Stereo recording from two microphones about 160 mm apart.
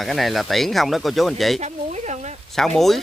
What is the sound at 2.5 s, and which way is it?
Speech, centre (ahead or behind).